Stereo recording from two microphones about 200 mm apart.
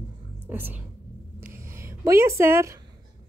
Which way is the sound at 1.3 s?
15° right (ahead or behind).